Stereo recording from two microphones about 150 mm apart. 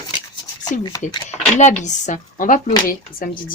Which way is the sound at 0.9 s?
25° left (ahead or behind).